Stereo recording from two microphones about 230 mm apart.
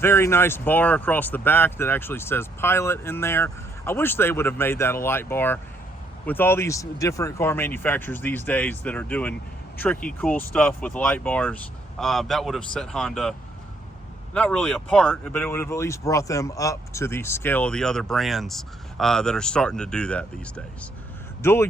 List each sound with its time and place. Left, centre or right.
0.0 s speech: centre
14.3 s speech: centre
21.4 s speech: centre